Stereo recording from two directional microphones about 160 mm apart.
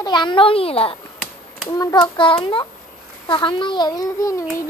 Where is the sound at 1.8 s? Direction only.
25° left (ahead or behind).